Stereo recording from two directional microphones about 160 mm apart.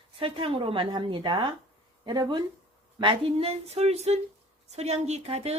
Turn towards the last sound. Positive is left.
turn(degrees=-40)  # may be behind; listen again after turning